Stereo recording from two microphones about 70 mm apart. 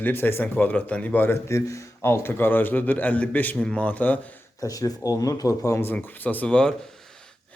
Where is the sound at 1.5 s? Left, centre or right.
Left.